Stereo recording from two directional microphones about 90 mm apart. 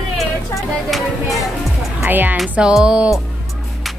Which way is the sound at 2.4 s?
5° right (ahead or behind).